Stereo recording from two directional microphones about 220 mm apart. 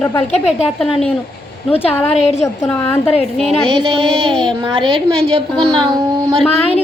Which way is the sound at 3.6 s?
20° right (ahead or behind).